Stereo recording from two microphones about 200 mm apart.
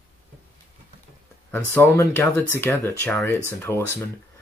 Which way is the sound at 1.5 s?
10° left (ahead or behind).